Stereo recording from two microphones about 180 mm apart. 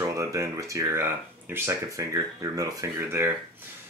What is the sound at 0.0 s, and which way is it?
Speech, 20° right (ahead or behind).